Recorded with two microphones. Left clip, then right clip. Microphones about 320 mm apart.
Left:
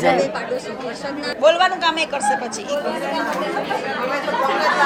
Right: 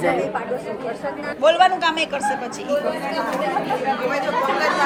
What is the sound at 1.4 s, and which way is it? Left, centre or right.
Speech, centre.